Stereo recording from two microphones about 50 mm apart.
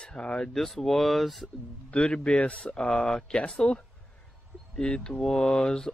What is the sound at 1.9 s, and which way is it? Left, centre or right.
Speech, left.